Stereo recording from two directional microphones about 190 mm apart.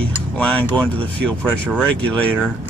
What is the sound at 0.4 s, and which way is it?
Speech, 5° left (ahead or behind).